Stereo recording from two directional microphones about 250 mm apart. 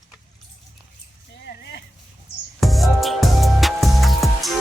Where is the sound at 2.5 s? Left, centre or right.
Centre.